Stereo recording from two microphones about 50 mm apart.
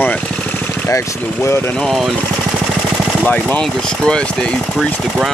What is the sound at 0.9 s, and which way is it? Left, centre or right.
Speech, left.